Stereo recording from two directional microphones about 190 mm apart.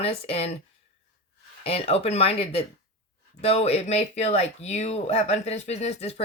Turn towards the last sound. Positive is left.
turn(degrees=35)  # may be behind; listen again after turning